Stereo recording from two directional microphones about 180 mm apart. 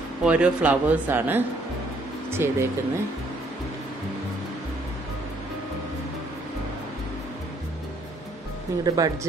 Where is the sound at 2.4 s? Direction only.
15° right (ahead or behind).